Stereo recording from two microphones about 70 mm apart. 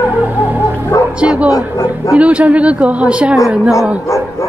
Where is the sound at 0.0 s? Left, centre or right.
Right.